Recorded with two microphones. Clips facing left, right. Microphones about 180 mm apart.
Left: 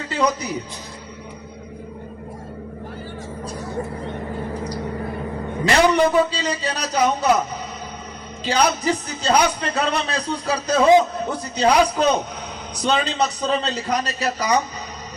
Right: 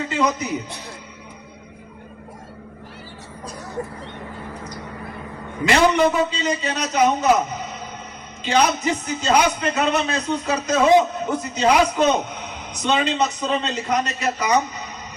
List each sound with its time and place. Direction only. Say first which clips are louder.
0.1 s a man's voice: left 2 dB; 35° left (ahead or behind)
5.6 s a man's voice: even; 35° left (ahead or behind)
8.4 s a man's voice: even; 35° left (ahead or behind)